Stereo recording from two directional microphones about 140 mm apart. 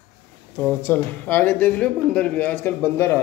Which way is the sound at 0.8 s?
15° left (ahead or behind).